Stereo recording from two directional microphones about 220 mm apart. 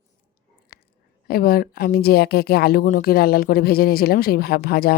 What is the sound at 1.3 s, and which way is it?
Speech, 40° left (ahead or behind).